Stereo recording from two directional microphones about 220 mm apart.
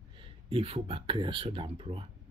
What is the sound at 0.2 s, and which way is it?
Speech, 25° right (ahead or behind).